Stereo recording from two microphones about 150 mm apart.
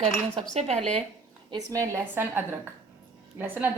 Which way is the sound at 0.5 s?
50° right (ahead or behind).